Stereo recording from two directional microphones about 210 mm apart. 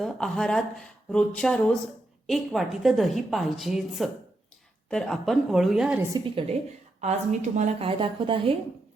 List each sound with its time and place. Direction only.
0.0 s a woman's voice: centre (ahead or behind)
6.1 s a woman's voice: 25° right (ahead or behind)